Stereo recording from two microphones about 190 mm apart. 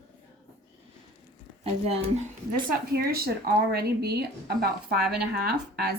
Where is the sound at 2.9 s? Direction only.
55° right (ahead or behind).